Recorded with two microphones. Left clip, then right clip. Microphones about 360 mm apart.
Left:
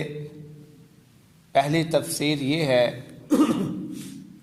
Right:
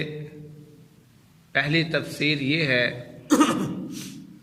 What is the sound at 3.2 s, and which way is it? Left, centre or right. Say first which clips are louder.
Cough: right 2 dB; right.